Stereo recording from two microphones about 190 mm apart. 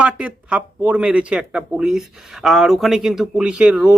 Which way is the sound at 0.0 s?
5° right (ahead or behind).